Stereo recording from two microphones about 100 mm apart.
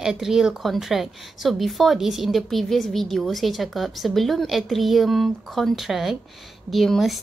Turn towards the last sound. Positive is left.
turn(degrees=0)  # may be behind; listen again after turning